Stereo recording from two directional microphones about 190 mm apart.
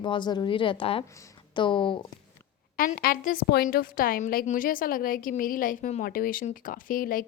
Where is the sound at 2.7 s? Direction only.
50° left (ahead or behind).